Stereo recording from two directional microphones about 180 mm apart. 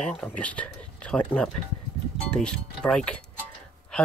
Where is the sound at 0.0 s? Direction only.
5° left (ahead or behind).